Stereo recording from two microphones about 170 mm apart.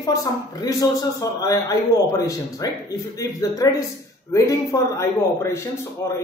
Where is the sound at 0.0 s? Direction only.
20° left (ahead or behind).